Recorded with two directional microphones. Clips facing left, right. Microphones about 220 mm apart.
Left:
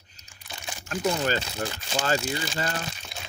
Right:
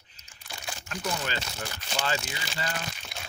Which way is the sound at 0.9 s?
40° left (ahead or behind).